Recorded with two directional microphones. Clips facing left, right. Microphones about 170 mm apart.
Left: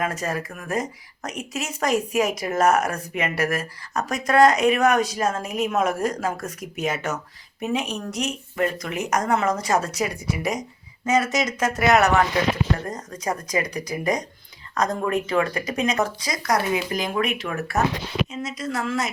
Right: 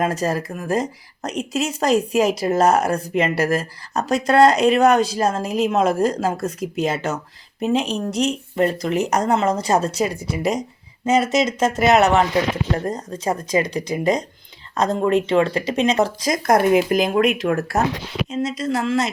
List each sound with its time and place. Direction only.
0.0 s speech: 35° right (ahead or behind)
16.3 s speech: 50° right (ahead or behind)
18.3 s speech: 30° right (ahead or behind)